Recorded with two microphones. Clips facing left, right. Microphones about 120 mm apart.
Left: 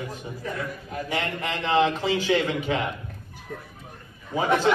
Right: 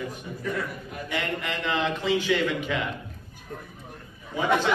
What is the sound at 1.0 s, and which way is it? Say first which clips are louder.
A man's voice: left 1 dB; 40° left (ahead or behind).